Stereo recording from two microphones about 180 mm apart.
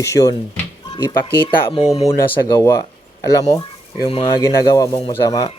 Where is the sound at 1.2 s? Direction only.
30° left (ahead or behind).